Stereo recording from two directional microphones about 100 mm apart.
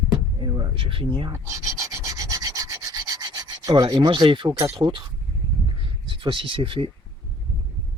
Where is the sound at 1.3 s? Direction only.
30° right (ahead or behind); by 4.5 s 50° right (ahead or behind).